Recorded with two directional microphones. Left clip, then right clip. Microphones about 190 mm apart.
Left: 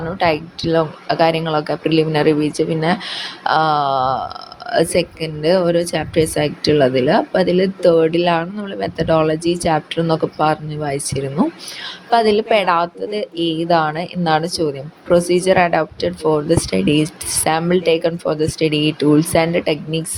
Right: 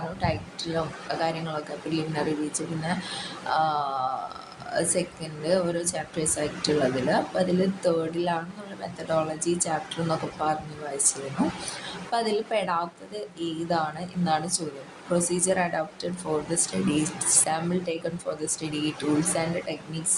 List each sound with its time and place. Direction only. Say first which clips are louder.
0.2 s a woman's voice: left 14 dB; 40° left (ahead or behind)
3.5 s a sound: left 10 dB; 40° left (ahead or behind)
4.7 s a woman's voice: left 11 dB; 45° left (ahead or behind)